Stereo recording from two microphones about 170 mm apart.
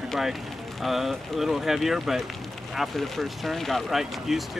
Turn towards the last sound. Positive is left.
turn(degrees=0)  # may be behind; listen again after turning